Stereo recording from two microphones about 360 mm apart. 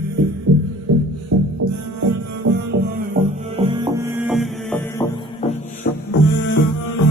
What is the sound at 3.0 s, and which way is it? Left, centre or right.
Music, centre.